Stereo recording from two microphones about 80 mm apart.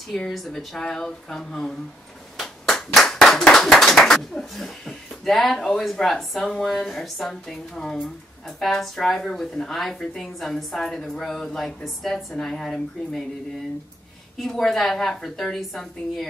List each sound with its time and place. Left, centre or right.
0.1 s a woman's voice: centre
2.3 s clapping: centre
8.5 s a woman's voice: centre
14.4 s a woman's voice: centre